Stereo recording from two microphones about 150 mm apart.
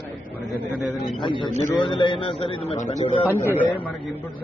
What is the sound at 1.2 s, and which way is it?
A man's voice, 30° left (ahead or behind).